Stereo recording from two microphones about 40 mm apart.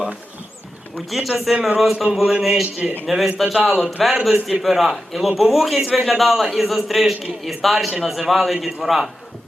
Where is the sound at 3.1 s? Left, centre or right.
Centre.